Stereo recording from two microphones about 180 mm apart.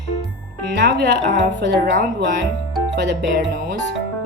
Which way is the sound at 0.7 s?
70° right (ahead or behind).